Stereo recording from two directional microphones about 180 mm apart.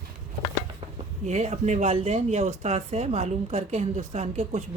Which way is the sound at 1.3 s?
40° right (ahead or behind).